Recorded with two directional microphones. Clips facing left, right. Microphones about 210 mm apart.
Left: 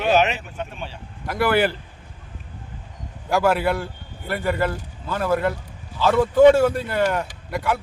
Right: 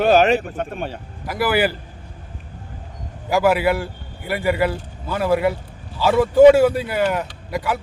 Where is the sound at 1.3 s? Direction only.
5° right (ahead or behind).